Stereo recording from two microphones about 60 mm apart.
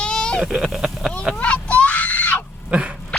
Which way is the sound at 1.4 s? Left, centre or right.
Left.